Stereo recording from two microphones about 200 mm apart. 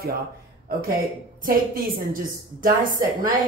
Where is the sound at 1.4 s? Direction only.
45° right (ahead or behind).